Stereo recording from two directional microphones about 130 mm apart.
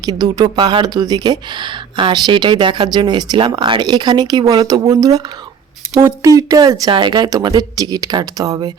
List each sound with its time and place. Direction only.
0.0 s speech: 30° right (ahead or behind)